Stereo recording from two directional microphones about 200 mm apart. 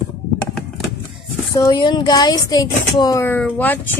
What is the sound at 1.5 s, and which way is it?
Speech, 20° left (ahead or behind).